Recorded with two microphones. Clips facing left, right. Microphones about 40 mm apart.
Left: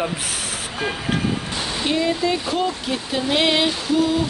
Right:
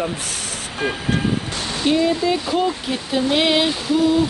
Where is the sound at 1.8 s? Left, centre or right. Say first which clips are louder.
Right 3 dB; centre.